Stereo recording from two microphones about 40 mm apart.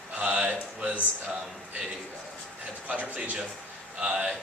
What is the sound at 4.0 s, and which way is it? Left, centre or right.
Speech, centre.